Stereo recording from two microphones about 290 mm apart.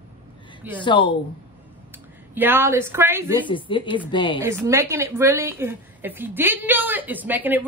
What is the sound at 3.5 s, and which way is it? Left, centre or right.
Speech, centre.